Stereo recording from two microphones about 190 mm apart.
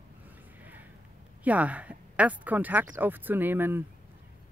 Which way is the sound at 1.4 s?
5° right (ahead or behind).